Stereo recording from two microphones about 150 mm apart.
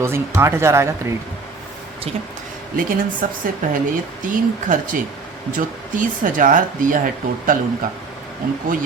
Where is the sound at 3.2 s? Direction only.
65° right (ahead or behind).